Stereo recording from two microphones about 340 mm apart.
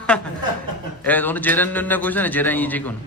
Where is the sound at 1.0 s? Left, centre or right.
Centre.